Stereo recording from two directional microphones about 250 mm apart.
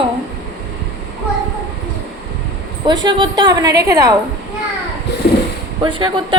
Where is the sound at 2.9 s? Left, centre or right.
Centre.